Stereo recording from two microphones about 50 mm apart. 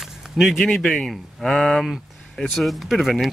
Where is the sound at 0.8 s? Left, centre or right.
Centre.